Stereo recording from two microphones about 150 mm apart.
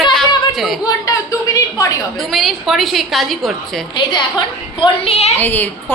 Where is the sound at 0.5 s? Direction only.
Centre (ahead or behind).